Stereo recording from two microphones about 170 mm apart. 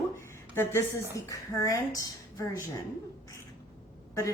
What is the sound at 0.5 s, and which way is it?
A woman's voice, 15° left (ahead or behind).